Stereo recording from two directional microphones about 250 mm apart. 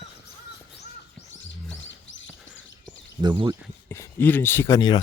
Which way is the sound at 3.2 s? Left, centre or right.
Centre.